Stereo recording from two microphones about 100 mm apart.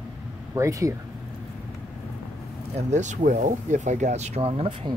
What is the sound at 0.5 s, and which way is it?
Speech, 30° right (ahead or behind).